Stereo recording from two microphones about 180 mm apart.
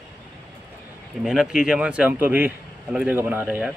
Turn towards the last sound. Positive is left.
turn(degrees=-10)  # may be behind; listen again after turning